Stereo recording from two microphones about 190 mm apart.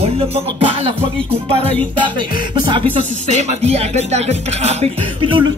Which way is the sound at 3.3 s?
35° right (ahead or behind).